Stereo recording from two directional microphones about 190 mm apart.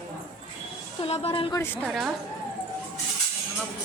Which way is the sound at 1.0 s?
30° left (ahead or behind).